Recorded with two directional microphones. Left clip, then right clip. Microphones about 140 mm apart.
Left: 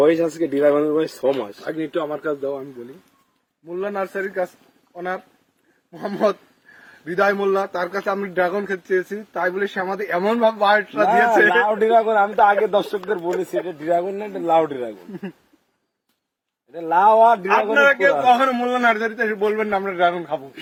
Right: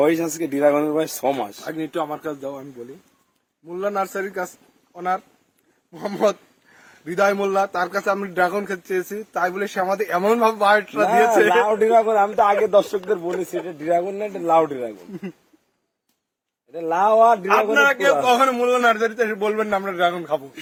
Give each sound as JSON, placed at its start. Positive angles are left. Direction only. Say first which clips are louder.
{"t": 0.0, "sound": "speech", "louder": "left 3 dB", "side_deg": -70}
{"t": 3.7, "sound": "speech", "louder": "right 1 dB", "side_deg": -30}
{"t": 4.9, "sound": "a man's voice", "louder": "right 3 dB", "side_deg": -20}
{"t": 16.7, "sound": "a man's voice", "louder": "left 2 dB", "side_deg": -30}